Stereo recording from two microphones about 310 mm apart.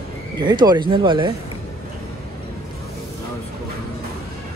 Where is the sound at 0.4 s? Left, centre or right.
Centre.